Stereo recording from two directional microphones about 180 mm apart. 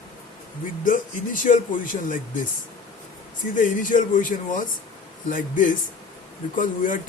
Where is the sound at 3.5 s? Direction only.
45° left (ahead or behind).